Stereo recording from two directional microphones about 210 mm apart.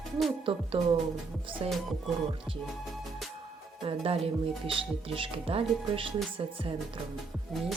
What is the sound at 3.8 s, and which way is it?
Speech, 25° right (ahead or behind).